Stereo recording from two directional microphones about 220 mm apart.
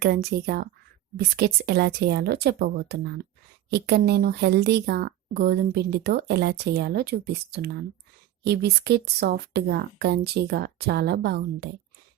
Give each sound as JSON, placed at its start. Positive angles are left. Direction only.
{"t": 0.0, "sound": "speech", "side_deg": -45}